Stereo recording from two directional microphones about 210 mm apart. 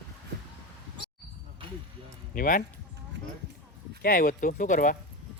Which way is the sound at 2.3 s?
40° left (ahead or behind).